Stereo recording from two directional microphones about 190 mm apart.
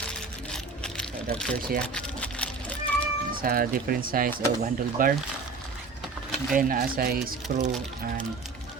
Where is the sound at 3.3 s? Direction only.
50° right (ahead or behind).